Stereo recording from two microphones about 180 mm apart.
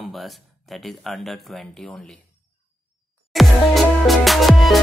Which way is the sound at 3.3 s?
Centre (ahead or behind).